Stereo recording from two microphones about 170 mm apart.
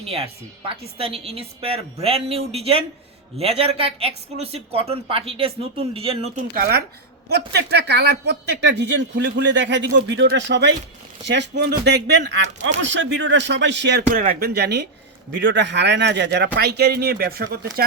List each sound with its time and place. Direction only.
0.0 s speech: 35° right (ahead or behind)
6.6 s speech: 65° right (ahead or behind); by 14.0 s 90° right
14.1 s speech: 55° right (ahead or behind); by 14.8 s 80° right
15.4 s speech: 90° right; by 17.6 s 65° right (ahead or behind)